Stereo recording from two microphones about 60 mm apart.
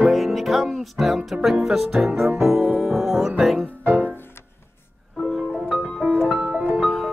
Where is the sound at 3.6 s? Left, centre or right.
Right.